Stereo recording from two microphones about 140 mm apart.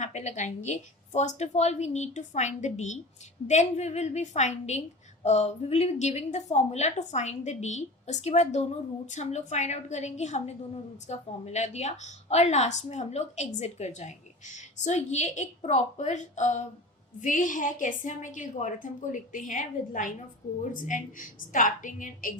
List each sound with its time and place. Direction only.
0.0 s a woman's voice: 55° left (ahead or behind); by 22.4 s 70° left (ahead or behind)